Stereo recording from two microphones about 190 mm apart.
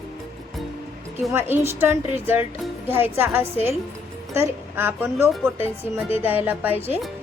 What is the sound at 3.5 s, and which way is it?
Speech, 35° left (ahead or behind).